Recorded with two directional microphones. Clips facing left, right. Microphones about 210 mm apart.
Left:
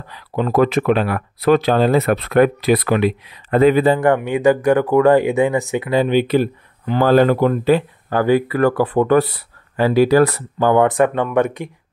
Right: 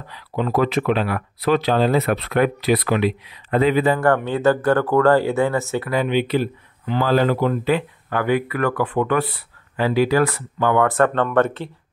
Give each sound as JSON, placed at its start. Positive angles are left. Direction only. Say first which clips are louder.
{"t": 0.1, "sound": "speech", "louder": "left 3 dB", "side_deg": 50}
{"t": 4.0, "sound": "speech", "louder": "left 3 dB", "side_deg": 15}
{"t": 5.9, "sound": "speech", "louder": "left 5 dB", "side_deg": 40}
{"t": 7.7, "sound": "speech", "louder": "left 5 dB", "side_deg": 35}
{"t": 10.9, "sound": "speech", "louder": "left 2 dB", "side_deg": 15}